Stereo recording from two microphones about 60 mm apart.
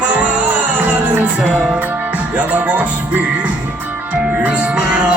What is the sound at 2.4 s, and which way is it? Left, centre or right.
Music, right.